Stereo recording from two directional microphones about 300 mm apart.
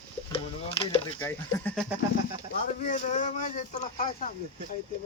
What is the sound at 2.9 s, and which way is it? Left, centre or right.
Speech, left.